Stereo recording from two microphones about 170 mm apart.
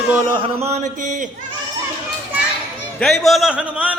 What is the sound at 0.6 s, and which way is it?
Speech, 45° right (ahead or behind).